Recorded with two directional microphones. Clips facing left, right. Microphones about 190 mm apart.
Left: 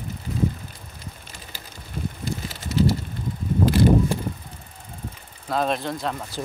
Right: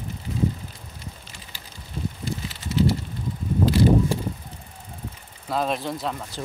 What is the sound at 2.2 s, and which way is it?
Bicycle, 45° left (ahead or behind).